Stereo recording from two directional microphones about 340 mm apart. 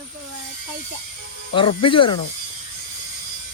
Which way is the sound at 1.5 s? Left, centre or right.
Centre.